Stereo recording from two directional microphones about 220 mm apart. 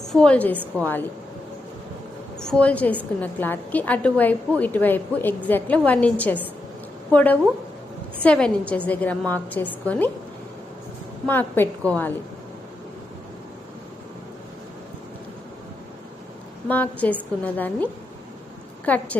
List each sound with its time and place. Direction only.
0.1 s a woman's voice: 5° left (ahead or behind)
2.4 s a woman's voice: 5° left (ahead or behind)
11.3 s a woman's voice: 10° left (ahead or behind)
16.6 s a woman's voice: 5° left (ahead or behind)
18.9 s a woman's voice: 5° left (ahead or behind)